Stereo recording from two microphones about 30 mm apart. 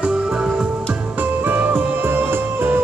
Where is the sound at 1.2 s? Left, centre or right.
Right.